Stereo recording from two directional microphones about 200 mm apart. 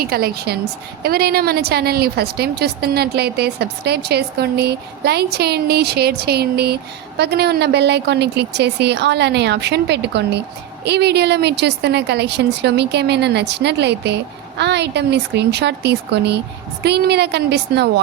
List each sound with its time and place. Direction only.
0.0 s a woman's voice: 50° right (ahead or behind)